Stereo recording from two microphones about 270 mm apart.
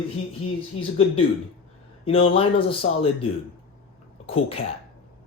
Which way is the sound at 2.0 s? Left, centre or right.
Left.